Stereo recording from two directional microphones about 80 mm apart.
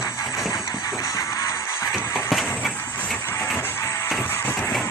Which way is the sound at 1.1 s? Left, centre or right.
Left.